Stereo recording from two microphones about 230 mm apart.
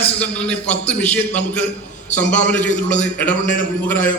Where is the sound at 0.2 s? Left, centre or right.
Centre.